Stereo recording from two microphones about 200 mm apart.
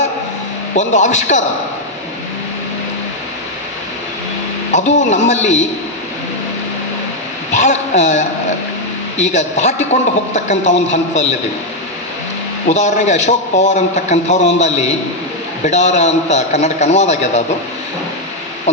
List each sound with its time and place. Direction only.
0.8 s a man's voice: 35° left (ahead or behind)
4.7 s a man's voice: 35° left (ahead or behind)
7.5 s a man's voice: 35° left (ahead or behind)
12.6 s a man's voice: 35° left (ahead or behind)